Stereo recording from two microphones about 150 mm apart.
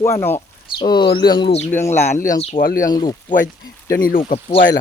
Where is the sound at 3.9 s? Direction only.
70° left (ahead or behind).